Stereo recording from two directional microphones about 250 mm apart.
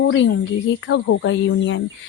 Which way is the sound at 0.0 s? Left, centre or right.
Left.